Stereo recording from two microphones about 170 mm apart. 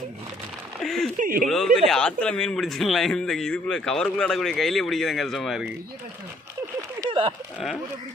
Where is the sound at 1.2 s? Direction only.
55° right (ahead or behind).